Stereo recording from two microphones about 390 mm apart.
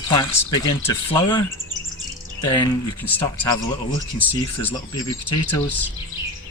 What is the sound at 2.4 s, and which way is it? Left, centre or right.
Speech, centre.